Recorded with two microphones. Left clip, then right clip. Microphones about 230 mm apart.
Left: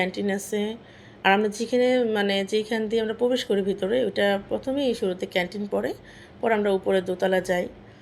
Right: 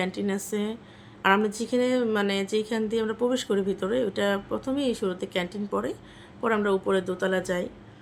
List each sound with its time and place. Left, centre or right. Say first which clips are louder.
0.0 s a woman's voice: left 3 dB; centre